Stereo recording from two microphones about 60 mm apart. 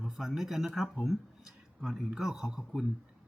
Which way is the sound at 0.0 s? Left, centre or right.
Centre.